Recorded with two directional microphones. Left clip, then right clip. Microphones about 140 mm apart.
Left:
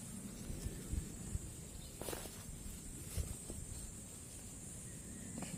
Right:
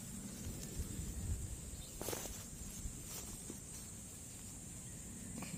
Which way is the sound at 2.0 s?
60° right (ahead or behind).